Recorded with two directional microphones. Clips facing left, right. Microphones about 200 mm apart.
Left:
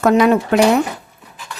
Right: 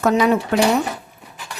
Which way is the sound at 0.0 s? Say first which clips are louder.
Left 4 dB; 55° left (ahead or behind).